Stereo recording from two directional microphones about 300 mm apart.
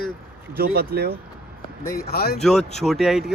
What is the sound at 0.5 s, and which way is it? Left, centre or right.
Speech, right.